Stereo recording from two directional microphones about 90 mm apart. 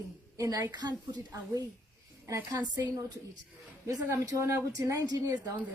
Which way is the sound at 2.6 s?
45° right (ahead or behind).